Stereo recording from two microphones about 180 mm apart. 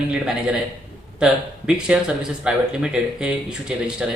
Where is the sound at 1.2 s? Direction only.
5° right (ahead or behind).